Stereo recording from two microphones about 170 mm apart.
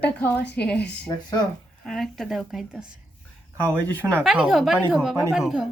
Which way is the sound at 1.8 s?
Centre (ahead or behind).